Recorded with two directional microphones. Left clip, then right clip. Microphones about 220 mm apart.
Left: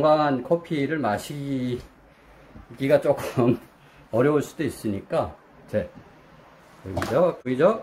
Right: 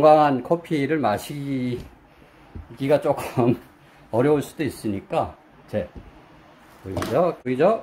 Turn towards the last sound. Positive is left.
turn(degrees=-5)  # may be behind; listen again after turning